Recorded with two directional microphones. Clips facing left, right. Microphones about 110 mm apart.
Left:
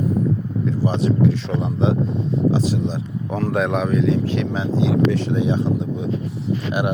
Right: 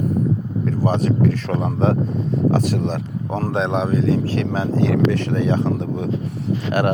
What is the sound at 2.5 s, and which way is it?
Speech, 60° right (ahead or behind).